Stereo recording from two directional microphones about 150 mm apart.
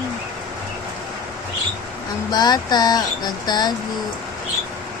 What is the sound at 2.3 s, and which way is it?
Speech, 25° left (ahead or behind).